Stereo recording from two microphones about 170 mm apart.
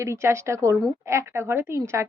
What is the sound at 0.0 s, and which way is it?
A woman's voice, 15° right (ahead or behind).